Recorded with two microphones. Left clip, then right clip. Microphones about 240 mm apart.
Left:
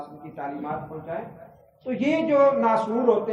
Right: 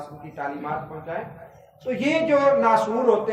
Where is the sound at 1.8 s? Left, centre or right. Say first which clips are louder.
Right 2 dB; right.